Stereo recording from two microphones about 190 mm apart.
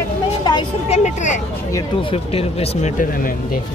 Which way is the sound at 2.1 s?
30° left (ahead or behind).